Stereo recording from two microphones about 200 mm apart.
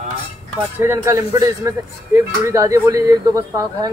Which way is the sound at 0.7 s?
10° right (ahead or behind).